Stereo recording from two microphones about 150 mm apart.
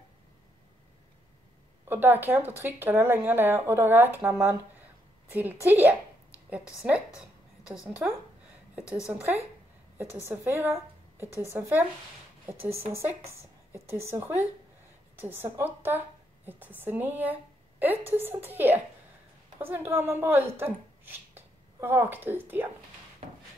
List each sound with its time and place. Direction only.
1.9 s a woman's voice: 15° right (ahead or behind)
10.5 s a woman's voice: 15° right (ahead or behind)
13.3 s a sound: 15° right (ahead or behind)
13.9 s a woman's voice: 20° right (ahead or behind)